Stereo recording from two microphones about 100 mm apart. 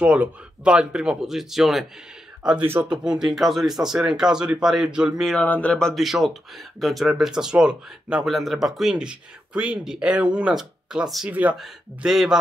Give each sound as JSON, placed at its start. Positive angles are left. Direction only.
{"t": 0.0, "sound": "speech", "side_deg": -10}
{"t": 2.6, "sound": "speech", "side_deg": -20}
{"t": 2.9, "sound": "speech", "side_deg": -5}
{"t": 5.4, "sound": "speech", "side_deg": 15}
{"t": 11.2, "sound": "speech", "side_deg": -15}
{"t": 11.5, "sound": "speech", "side_deg": -5}